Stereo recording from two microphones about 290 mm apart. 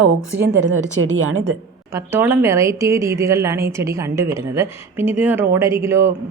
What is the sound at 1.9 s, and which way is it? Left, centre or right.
Speech, centre.